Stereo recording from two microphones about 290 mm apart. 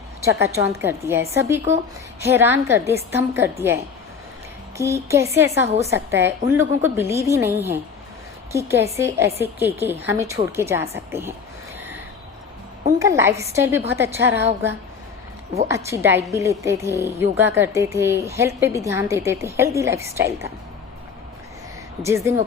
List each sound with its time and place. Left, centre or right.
0.3 s a woman's voice: centre
4.8 s a woman's voice: centre
5.6 s a woman's voice: right
5.9 s a woman's voice: centre
13.0 s a woman's voice: centre
22.0 s a woman's voice: centre